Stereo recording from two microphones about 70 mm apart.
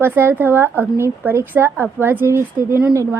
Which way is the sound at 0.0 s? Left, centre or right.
Right.